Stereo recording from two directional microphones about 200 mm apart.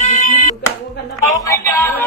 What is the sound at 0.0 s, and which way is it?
Music, 40° left (ahead or behind).